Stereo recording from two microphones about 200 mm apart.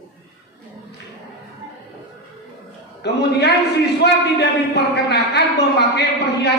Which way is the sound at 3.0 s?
60° left (ahead or behind).